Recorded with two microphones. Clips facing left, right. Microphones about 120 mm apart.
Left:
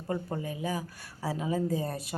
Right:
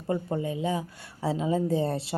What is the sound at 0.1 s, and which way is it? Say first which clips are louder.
A woman's voice: right 5 dB; 25° right (ahead or behind).